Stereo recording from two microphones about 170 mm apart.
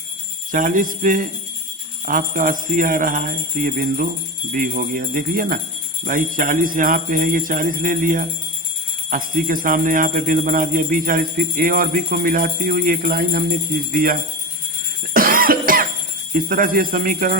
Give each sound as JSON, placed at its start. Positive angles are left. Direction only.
{"t": 0.5, "sound": "jingle bell", "side_deg": -50}
{"t": 15.1, "sound": "cough", "side_deg": -55}
{"t": 16.3, "sound": "jingle bell", "side_deg": -55}